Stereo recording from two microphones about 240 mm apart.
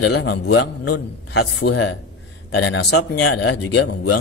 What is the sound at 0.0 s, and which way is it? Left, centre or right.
Speech, left.